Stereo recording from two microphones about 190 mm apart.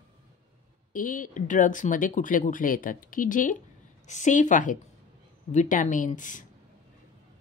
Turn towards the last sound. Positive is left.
turn(degrees=40)  # may be behind; listen again after turning